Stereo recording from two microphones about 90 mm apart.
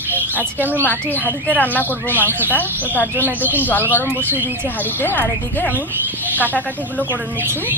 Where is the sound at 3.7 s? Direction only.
20° left (ahead or behind).